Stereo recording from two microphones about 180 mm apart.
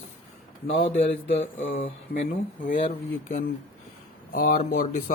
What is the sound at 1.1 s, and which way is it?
Speech, 90° left.